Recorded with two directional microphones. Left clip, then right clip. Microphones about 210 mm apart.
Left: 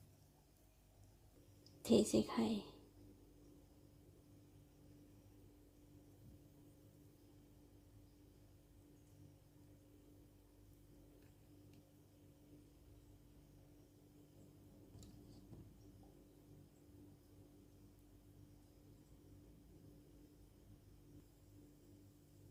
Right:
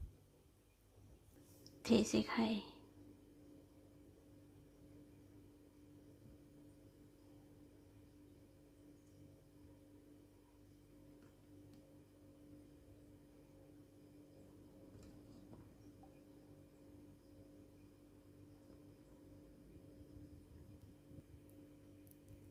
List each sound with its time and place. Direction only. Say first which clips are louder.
1.8 s a woman's voice: left 1 dB; 5° left (ahead or behind)